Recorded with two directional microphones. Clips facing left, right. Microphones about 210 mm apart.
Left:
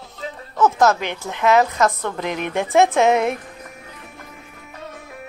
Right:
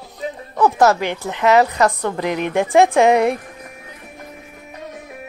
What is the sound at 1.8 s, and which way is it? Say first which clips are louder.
Speech: right 3 dB; 15° right (ahead or behind).